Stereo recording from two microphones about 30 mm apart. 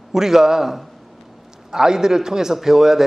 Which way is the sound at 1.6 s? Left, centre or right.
Centre.